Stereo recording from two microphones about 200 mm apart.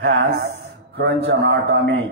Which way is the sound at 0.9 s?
55° right (ahead or behind).